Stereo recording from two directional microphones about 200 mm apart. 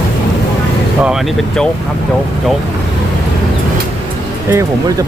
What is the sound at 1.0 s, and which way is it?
Speech, centre (ahead or behind).